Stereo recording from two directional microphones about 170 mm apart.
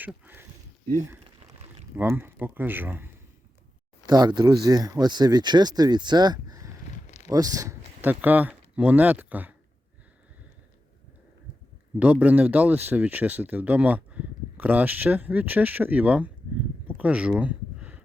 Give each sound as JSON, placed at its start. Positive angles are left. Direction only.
{"t": 0.0, "sound": "speech", "side_deg": -10}
{"t": 2.0, "sound": "speech", "side_deg": -10}
{"t": 4.0, "sound": "speech", "side_deg": -25}
{"t": 11.9, "sound": "speech", "side_deg": -10}
{"t": 16.8, "sound": "a sound", "side_deg": -10}